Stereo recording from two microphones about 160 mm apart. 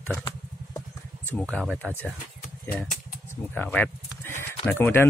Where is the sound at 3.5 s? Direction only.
10° left (ahead or behind).